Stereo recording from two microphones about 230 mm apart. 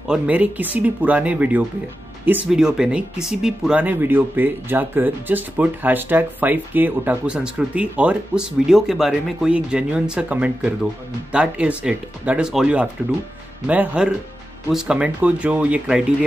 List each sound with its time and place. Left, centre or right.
0.1 s speech: centre